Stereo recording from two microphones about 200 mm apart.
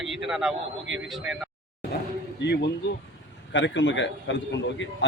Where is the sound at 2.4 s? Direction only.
55° left (ahead or behind).